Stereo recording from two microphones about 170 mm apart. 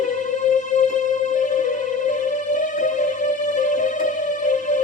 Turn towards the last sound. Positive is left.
turn(degrees=45)  # may be behind; listen again after turning